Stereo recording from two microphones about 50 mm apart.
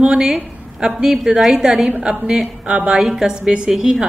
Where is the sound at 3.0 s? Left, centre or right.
Centre.